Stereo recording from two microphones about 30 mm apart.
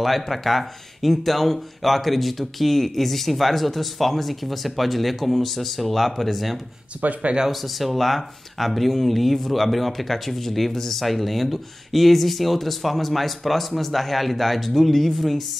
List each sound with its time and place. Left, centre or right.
0.0 s speech: centre
7.0 s speech: right
7.4 s speech: centre